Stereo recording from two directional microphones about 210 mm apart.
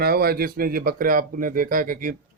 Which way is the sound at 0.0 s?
45° right (ahead or behind).